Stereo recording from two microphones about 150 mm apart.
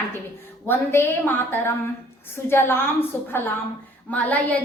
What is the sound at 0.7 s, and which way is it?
A woman's voice, 15° left (ahead or behind).